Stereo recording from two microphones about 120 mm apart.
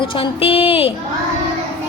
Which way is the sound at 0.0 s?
45° left (ahead or behind).